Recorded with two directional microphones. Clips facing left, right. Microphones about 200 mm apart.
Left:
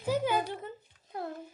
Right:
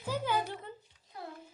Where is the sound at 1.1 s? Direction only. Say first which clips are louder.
Left 7 dB; 50° left (ahead or behind).